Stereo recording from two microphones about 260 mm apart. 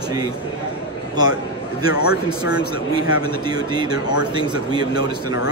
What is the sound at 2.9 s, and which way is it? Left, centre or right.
Speech, centre.